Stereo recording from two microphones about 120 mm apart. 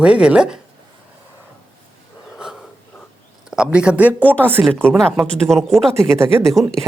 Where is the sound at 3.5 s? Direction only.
5° right (ahead or behind).